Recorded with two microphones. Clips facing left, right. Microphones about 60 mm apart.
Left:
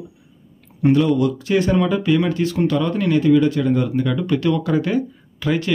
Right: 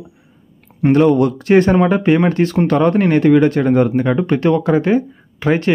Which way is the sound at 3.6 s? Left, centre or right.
Right.